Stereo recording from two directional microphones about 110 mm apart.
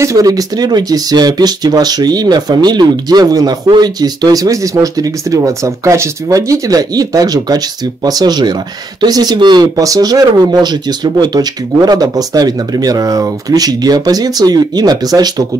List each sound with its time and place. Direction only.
0.0 s speech: 30° right (ahead or behind)